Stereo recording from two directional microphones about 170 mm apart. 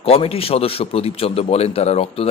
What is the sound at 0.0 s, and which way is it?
A man's voice, 35° left (ahead or behind).